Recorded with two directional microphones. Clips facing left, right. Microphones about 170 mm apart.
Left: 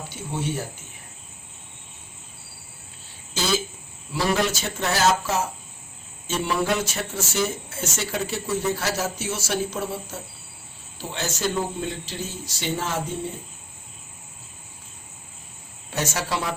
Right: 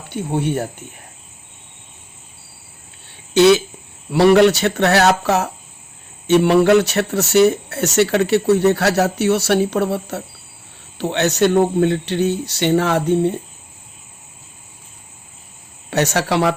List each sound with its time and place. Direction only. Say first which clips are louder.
0.1 s speech: right 10 dB; 60° right (ahead or behind)
3.3 s speech: right 14 dB; 70° right (ahead or behind)
15.9 s speech: right 9 dB; 70° right (ahead or behind)